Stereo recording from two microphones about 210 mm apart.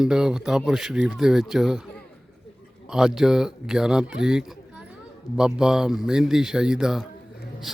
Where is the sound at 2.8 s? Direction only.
Centre (ahead or behind).